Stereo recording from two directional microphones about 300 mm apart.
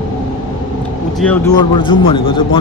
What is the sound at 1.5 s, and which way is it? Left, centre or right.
Speech, centre.